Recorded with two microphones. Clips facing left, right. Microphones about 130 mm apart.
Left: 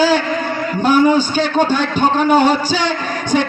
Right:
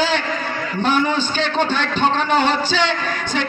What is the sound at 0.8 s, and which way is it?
A man's voice, 45° left (ahead or behind).